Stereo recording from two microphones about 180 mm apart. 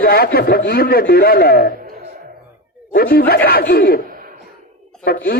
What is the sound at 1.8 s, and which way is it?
Music, 55° right (ahead or behind).